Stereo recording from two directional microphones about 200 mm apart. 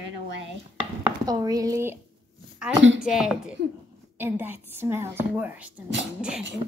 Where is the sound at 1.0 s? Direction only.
20° right (ahead or behind).